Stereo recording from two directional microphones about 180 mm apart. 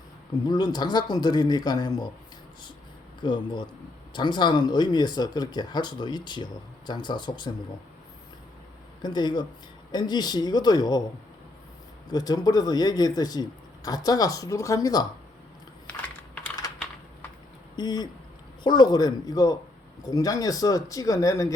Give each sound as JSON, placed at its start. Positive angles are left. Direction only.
{"t": 0.4, "sound": "speech", "side_deg": 25}
{"t": 3.2, "sound": "speech", "side_deg": 25}
{"t": 9.0, "sound": "speech", "side_deg": 25}
{"t": 12.0, "sound": "speech", "side_deg": 20}
{"t": 17.7, "sound": "speech", "side_deg": 25}